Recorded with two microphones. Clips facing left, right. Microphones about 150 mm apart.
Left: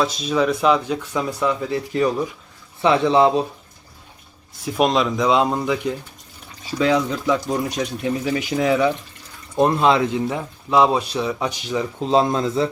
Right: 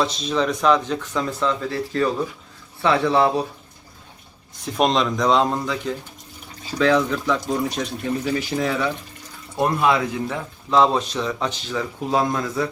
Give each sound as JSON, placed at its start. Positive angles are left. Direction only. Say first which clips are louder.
{"t": 0.0, "sound": "speech", "louder": "left 2 dB", "side_deg": 5}
{"t": 4.6, "sound": "speech", "louder": "left 1 dB", "side_deg": 5}